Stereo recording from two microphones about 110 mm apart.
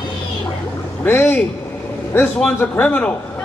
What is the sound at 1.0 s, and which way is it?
A man's voice, 20° left (ahead or behind).